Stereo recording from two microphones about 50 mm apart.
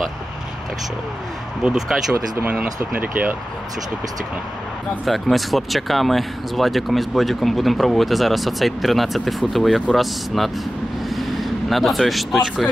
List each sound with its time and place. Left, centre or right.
1.6 s speech: centre
2.9 s speech: right
5.0 s speech: centre
11.1 s vehicle: centre